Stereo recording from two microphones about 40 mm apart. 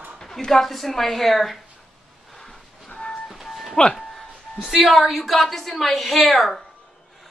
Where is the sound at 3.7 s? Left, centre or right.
Left.